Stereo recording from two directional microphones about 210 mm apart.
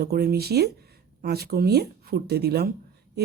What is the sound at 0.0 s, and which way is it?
Speech, 50° right (ahead or behind).